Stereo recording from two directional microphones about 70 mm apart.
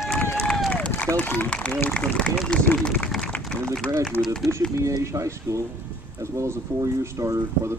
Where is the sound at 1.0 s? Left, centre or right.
Left.